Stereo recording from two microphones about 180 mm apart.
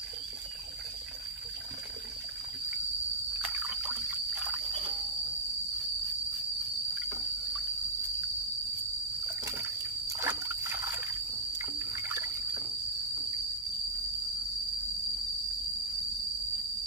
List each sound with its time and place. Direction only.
3.3 s trickle: 5° right (ahead or behind)
10.2 s trickle: 15° right (ahead or behind)